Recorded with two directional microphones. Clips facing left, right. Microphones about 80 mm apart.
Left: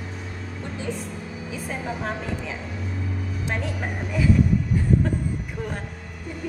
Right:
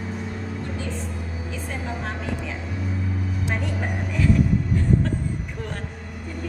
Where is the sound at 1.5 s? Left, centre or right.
Centre.